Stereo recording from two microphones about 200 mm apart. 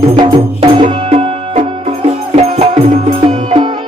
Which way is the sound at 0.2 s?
25° right (ahead or behind).